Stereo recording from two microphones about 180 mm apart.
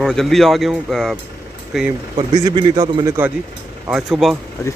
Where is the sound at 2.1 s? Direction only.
25° right (ahead or behind).